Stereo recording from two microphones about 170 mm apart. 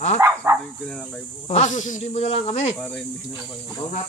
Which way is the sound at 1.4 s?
40° left (ahead or behind).